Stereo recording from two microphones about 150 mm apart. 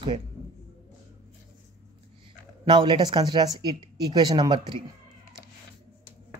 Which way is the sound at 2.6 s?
30° right (ahead or behind).